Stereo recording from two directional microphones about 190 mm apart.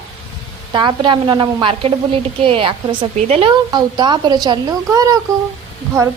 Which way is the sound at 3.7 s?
20° right (ahead or behind).